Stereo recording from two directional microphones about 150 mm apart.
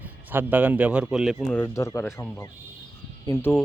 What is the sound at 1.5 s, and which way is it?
Speech, 10° left (ahead or behind).